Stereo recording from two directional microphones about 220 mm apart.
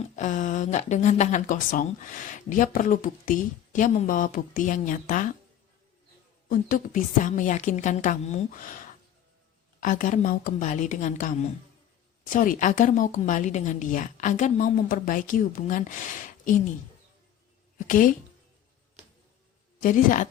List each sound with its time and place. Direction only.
0.0 s speech: 35° left (ahead or behind)
6.5 s speech: 40° left (ahead or behind)
17.7 s speech: 35° left (ahead or behind)
19.8 s speech: 35° left (ahead or behind)